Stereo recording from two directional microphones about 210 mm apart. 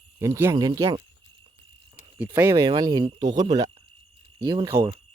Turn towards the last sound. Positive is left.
turn(degrees=-15)  # may be behind; listen again after turning